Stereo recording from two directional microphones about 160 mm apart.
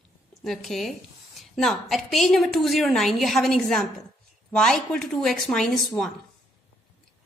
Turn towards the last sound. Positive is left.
turn(degrees=0)  # may be behind; listen again after turning